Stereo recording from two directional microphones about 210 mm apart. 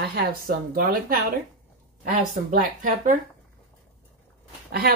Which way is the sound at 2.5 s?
40° right (ahead or behind).